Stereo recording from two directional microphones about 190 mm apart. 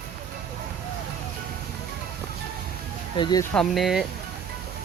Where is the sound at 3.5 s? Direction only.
Centre (ahead or behind).